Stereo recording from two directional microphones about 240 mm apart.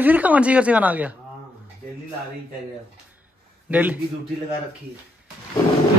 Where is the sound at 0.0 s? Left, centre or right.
Centre.